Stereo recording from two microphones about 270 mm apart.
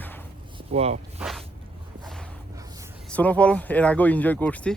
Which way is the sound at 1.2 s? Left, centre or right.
Centre.